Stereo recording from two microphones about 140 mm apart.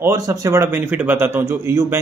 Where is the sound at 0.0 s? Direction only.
20° right (ahead or behind).